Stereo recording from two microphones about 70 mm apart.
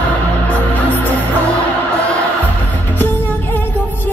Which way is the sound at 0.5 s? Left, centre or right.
Left.